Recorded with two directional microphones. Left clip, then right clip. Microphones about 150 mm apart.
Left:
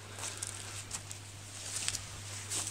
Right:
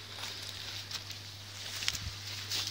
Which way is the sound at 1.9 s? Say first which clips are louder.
Right 4 dB; 15° right (ahead or behind).